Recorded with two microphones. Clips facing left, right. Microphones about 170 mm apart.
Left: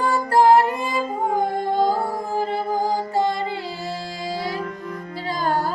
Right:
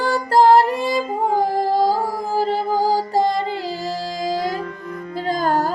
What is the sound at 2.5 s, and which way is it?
Music, 35° right (ahead or behind).